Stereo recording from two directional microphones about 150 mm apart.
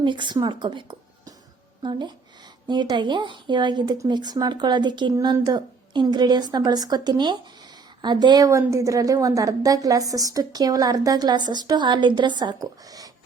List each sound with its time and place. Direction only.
0.0 s speech: 30° right (ahead or behind)